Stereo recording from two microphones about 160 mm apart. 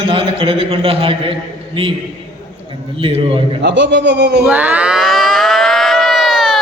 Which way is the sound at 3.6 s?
90° right.